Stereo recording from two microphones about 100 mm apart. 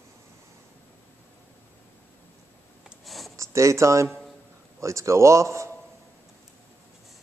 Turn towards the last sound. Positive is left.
turn(degrees=-30)  # may be behind; listen again after turning